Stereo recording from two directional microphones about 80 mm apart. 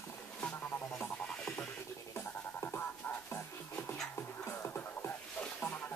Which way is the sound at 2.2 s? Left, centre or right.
Left.